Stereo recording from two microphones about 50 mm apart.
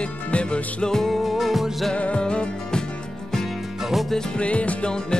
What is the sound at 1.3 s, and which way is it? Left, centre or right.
Music, centre.